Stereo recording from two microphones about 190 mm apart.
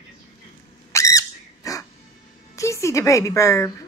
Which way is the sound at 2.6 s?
15° left (ahead or behind).